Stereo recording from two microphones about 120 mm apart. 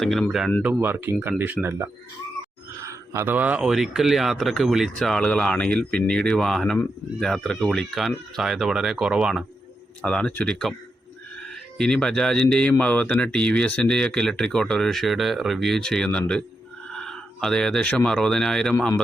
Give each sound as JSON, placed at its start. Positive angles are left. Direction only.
{"t": 0.0, "sound": "speech", "side_deg": 0}
{"t": 0.6, "sound": "speech", "side_deg": -15}
{"t": 2.8, "sound": "speech", "side_deg": -20}
{"t": 10.0, "sound": "speech", "side_deg": 5}